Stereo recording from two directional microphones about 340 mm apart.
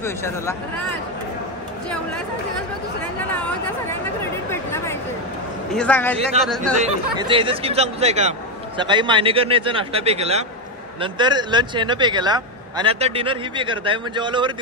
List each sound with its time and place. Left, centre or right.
0.0 s speech: centre
4.2 s a sound: centre
5.7 s a man's voice: centre
6.4 s speech: centre